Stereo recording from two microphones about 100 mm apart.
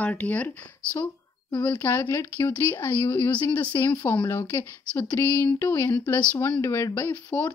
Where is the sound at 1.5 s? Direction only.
20° left (ahead or behind).